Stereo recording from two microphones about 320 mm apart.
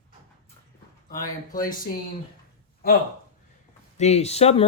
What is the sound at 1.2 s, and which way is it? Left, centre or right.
Speech, centre.